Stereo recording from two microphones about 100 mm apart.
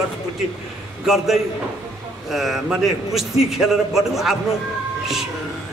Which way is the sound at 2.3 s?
Centre (ahead or behind).